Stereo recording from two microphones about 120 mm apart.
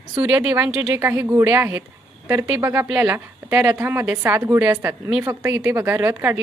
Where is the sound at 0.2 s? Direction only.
10° right (ahead or behind).